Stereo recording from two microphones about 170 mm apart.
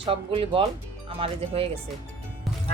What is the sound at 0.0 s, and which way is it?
Speech, 30° right (ahead or behind).